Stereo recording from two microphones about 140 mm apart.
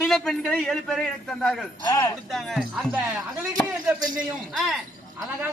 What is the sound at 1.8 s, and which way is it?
Speech, 25° left (ahead or behind).